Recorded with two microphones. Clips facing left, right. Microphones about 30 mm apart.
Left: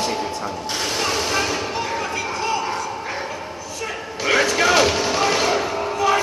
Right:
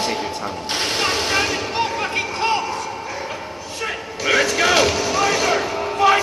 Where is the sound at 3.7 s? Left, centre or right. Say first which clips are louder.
Right 3 dB; right.